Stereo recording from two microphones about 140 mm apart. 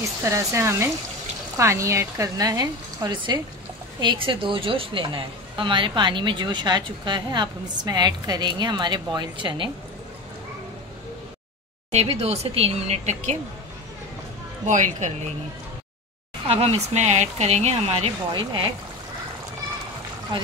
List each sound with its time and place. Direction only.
0.2 s a woman's voice: 20° right (ahead or behind)
11.9 s speech: 50° right (ahead or behind)
14.7 s a woman's voice: 60° right (ahead or behind)
16.4 s speech: 45° right (ahead or behind)